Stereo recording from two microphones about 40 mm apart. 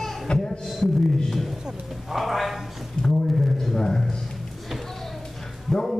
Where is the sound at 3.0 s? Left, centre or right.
Left.